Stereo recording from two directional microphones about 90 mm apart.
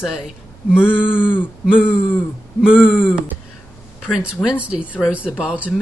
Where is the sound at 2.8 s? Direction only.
20° left (ahead or behind).